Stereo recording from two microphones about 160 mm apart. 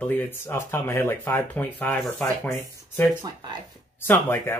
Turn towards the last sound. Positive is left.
turn(degrees=15)  # may be behind; listen again after turning